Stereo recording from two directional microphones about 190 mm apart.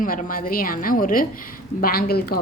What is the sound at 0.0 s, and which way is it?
A woman's voice, 45° left (ahead or behind).